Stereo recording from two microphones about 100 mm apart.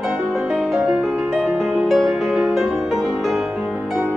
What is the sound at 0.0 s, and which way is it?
Music, centre (ahead or behind).